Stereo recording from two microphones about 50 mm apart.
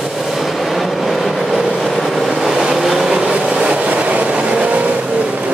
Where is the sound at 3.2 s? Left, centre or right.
Centre.